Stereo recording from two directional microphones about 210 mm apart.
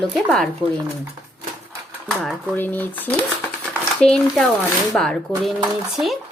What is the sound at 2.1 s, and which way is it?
Speech, 5° left (ahead or behind).